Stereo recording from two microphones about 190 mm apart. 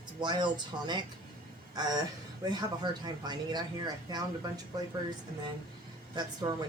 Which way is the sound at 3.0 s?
20° right (ahead or behind).